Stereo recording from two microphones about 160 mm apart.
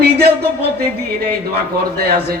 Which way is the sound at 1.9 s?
75° right (ahead or behind).